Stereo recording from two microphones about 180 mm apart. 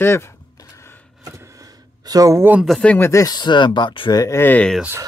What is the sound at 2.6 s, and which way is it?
Speech, centre (ahead or behind).